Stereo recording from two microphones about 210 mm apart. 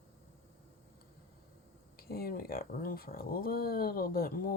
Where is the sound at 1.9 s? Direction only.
45° left (ahead or behind).